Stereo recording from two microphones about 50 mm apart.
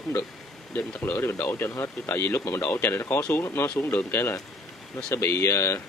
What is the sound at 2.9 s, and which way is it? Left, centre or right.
Speech, left.